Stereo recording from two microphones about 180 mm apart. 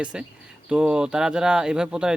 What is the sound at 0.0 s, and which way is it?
Speech, 5° right (ahead or behind).